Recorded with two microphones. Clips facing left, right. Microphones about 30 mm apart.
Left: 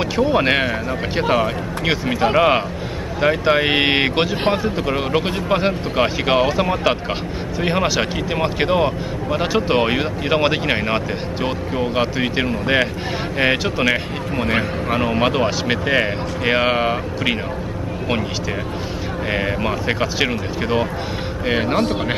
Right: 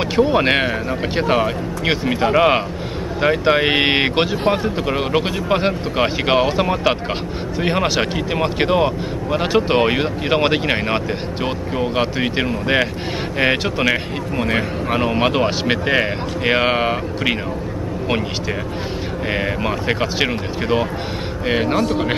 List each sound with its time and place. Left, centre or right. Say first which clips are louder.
0.1 s speech: right 2 dB; centre
19.3 s speech: even; centre
21.7 s speech: right 1 dB; left